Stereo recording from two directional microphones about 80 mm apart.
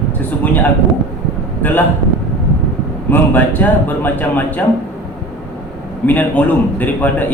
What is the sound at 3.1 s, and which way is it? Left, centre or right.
A man's voice, left.